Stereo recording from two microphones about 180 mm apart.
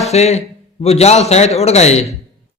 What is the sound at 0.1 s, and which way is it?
A man's voice, 35° left (ahead or behind).